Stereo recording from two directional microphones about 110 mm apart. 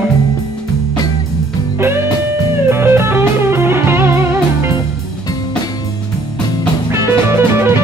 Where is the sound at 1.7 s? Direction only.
20° right (ahead or behind).